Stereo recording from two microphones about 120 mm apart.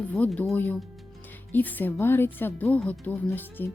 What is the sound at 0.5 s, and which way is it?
A woman's voice, 15° left (ahead or behind).